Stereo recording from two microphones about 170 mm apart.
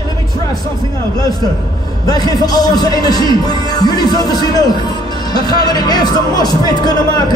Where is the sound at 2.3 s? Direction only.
25° left (ahead or behind).